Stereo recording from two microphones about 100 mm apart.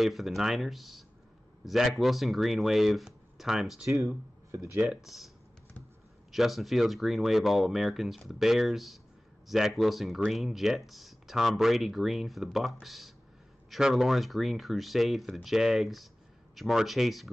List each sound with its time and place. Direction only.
0.0 s speech: centre (ahead or behind)
3.9 s speech: 30° right (ahead or behind)
4.8 s speech: centre (ahead or behind)
6.3 s speech: centre (ahead or behind)